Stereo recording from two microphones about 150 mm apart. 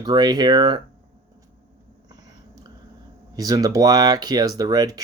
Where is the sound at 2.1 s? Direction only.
25° right (ahead or behind).